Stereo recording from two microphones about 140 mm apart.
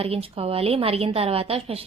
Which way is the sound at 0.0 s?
45° right (ahead or behind).